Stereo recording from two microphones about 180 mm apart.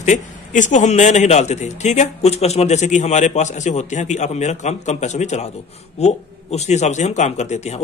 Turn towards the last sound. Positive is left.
turn(degrees=40)  # may be behind; listen again after turning